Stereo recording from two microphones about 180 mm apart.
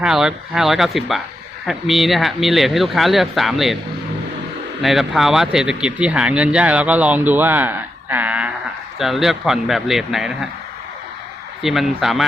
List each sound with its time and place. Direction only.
0.0 s speech: 5° right (ahead or behind)
4.8 s speech: centre (ahead or behind)
11.6 s speech: centre (ahead or behind)